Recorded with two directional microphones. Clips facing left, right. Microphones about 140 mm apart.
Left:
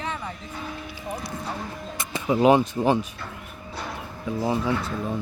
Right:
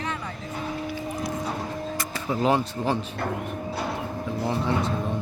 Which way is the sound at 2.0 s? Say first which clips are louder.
Left 7 dB; 20° left (ahead or behind).